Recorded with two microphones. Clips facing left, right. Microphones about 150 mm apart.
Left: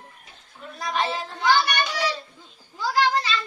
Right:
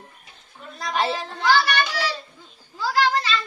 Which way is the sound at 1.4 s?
20° left (ahead or behind).